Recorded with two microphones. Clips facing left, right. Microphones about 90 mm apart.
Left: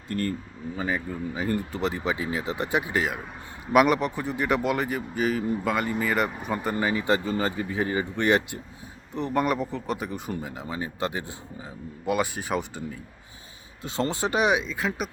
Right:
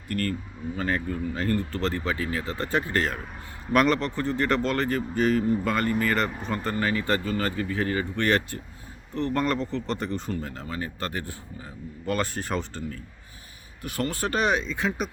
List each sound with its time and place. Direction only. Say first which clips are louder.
0.1 s speech: even; 20° left (ahead or behind)
0.8 s speech: right 1 dB; 10° left (ahead or behind)